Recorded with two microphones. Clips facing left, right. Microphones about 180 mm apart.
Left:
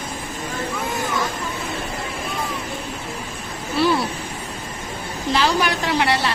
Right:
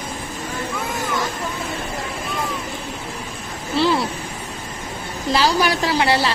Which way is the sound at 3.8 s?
25° right (ahead or behind).